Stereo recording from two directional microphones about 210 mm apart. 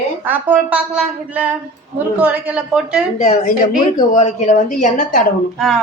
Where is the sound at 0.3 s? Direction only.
5° right (ahead or behind).